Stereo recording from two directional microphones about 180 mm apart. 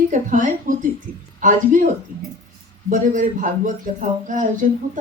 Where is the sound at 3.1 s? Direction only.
45° right (ahead or behind).